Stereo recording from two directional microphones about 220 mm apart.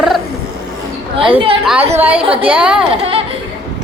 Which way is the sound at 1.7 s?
5° right (ahead or behind).